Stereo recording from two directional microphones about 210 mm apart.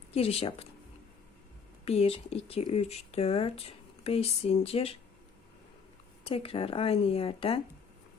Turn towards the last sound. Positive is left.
turn(degrees=25)  # may be behind; listen again after turning